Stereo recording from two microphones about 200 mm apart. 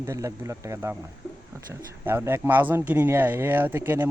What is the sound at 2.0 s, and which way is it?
Speech, 10° right (ahead or behind).